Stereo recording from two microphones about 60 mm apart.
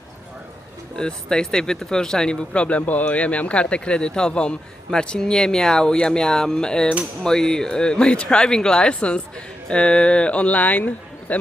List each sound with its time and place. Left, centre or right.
0.9 s speech: centre